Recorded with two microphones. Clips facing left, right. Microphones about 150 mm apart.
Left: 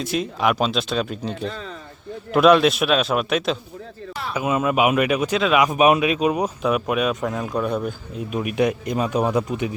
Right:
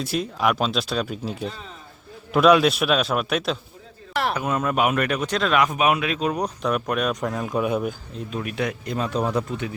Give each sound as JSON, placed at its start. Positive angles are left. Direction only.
{"t": 0.0, "sound": "a man's voice", "side_deg": -5}
{"t": 4.1, "sound": "a sound", "side_deg": -70}
{"t": 4.4, "sound": "speech", "side_deg": 5}
{"t": 5.7, "sound": "a man's voice", "side_deg": 20}
{"t": 8.3, "sound": "speech", "side_deg": 15}